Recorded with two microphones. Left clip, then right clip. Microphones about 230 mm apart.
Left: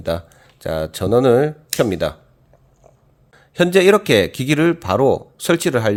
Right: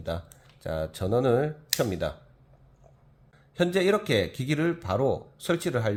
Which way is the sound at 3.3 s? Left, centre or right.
Left.